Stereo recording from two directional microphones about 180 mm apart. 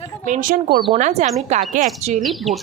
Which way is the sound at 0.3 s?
50° right (ahead or behind).